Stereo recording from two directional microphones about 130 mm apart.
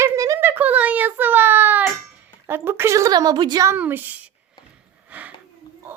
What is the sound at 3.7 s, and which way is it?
Female singing, 15° right (ahead or behind).